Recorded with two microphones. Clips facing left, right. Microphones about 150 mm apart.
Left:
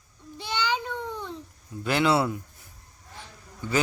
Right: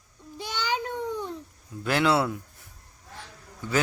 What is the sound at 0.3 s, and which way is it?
Child singing, 45° right (ahead or behind).